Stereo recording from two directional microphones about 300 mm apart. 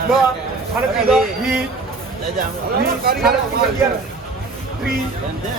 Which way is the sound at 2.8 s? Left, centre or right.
Right.